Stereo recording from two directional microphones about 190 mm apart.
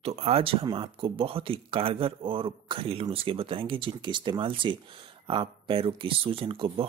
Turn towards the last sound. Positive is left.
turn(degrees=-30)  # may be behind; listen again after turning